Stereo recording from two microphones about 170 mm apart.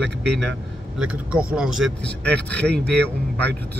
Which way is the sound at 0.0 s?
5° left (ahead or behind).